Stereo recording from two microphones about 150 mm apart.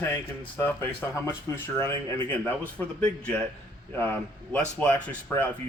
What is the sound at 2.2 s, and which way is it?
Speech, 10° left (ahead or behind).